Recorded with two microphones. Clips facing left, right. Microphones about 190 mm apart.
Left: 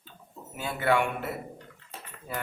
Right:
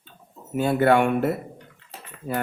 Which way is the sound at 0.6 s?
50° right (ahead or behind).